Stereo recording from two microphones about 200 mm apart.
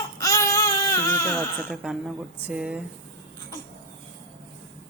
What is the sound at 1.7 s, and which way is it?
Speech, centre (ahead or behind).